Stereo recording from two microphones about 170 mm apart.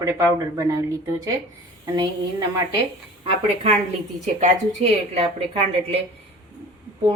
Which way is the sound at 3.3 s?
35° right (ahead or behind).